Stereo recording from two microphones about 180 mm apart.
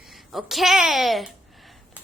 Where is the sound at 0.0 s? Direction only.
Centre (ahead or behind).